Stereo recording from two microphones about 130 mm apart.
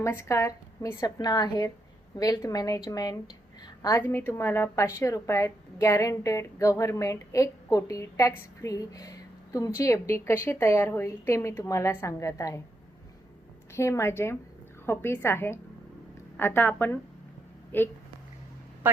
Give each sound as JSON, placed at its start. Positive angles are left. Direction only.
{"t": 0.0, "sound": "a woman's voice", "side_deg": 20}
{"t": 13.7, "sound": "a woman's voice", "side_deg": 20}